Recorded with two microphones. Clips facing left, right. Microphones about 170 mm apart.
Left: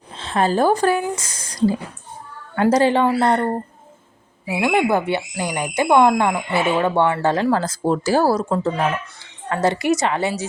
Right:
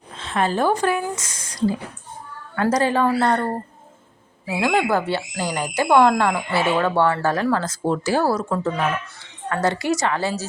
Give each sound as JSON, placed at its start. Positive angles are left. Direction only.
{"t": 0.2, "sound": "speech", "side_deg": 35}
{"t": 2.6, "sound": "speech", "side_deg": 25}